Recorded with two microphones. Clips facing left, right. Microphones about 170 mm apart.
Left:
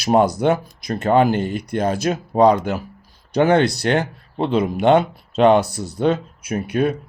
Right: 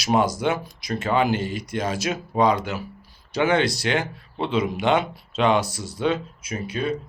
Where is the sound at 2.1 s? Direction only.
40° left (ahead or behind).